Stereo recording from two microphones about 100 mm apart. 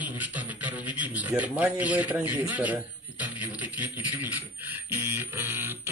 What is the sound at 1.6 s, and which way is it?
A man's voice, 15° right (ahead or behind).